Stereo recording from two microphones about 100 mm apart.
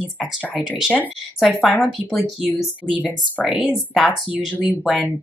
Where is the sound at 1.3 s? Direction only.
Centre (ahead or behind).